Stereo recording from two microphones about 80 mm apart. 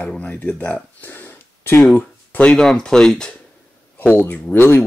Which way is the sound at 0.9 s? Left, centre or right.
Left.